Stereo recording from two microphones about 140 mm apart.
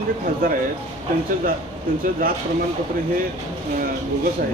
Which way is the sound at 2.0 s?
90° right.